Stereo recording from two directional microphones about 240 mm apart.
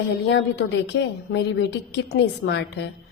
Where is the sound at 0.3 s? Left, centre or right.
Left.